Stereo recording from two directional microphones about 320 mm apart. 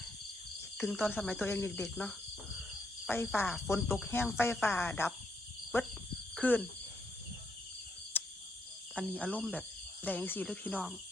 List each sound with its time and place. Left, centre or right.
0.8 s speech: centre
5.7 s cricket: centre
8.1 s cricket: centre
9.0 s speech: centre